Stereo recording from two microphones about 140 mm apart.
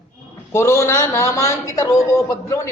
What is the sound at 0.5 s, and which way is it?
A man's voice, 20° left (ahead or behind).